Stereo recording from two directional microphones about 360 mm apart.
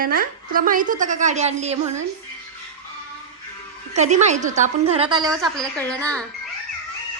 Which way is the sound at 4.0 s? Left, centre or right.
Centre.